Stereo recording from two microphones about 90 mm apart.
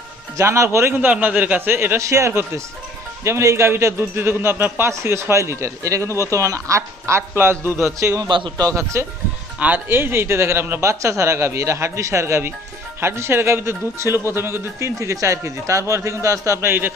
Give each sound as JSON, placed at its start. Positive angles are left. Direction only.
{"t": 0.3, "sound": "speech", "side_deg": -35}
{"t": 0.9, "sound": "speech", "side_deg": -15}
{"t": 8.3, "sound": "a man's voice", "side_deg": -65}
{"t": 8.7, "sound": "speech", "side_deg": -30}
{"t": 9.6, "sound": "speech", "side_deg": -20}